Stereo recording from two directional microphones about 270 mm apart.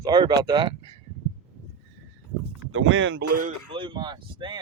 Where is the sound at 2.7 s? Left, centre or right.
Right.